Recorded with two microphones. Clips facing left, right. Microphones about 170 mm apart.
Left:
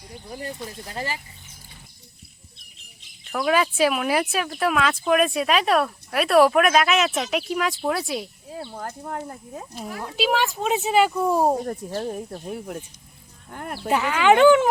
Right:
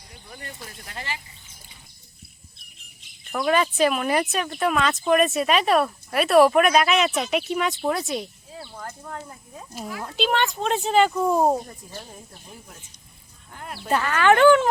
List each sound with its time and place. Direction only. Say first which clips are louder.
0.9 s speech: left 4 dB; 35° left (ahead or behind)
3.3 s speech: even; 5° left (ahead or behind)
8.5 s speech: left 4 dB; 45° left (ahead or behind)
10.0 s speech: left 1 dB; 5° left (ahead or behind)
11.6 s speech: left 12 dB; 65° left (ahead or behind)
13.5 s speech: left 5 dB; 50° left (ahead or behind)
13.7 s speech: left 1 dB; 15° left (ahead or behind)